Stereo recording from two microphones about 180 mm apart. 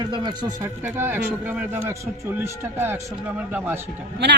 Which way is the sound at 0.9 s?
10° right (ahead or behind).